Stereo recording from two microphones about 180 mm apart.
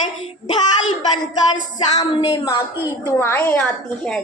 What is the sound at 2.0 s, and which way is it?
Speech, 25° left (ahead or behind).